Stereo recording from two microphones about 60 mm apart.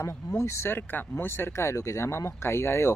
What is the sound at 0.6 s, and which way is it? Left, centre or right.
Speech, left.